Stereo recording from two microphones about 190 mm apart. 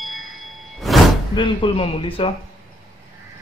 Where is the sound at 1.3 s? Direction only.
25° left (ahead or behind).